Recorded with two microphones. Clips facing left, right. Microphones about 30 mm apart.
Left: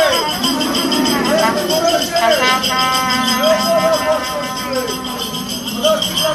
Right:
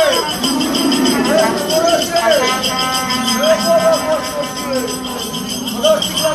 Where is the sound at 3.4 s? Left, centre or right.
Centre.